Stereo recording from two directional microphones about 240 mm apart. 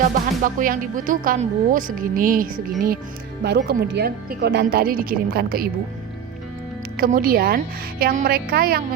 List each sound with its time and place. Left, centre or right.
0.0 s speech: right
6.9 s speech: right